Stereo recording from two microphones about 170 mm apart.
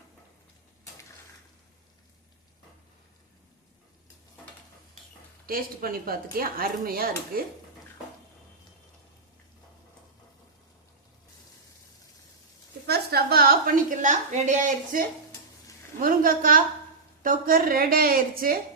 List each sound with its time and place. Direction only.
5.5 s speech: 60° right (ahead or behind)
12.9 s a sound: 70° right (ahead or behind); by 15.0 s 45° right (ahead or behind)
16.0 s speech: 55° right (ahead or behind)